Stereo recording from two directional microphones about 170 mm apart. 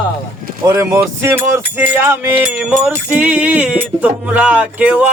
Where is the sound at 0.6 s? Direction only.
15° right (ahead or behind).